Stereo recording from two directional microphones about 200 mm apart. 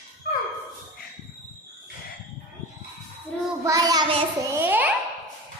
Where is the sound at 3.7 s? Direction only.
15° right (ahead or behind).